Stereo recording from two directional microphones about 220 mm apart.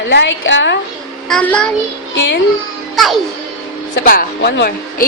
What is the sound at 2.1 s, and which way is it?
Speech, 55° left (ahead or behind).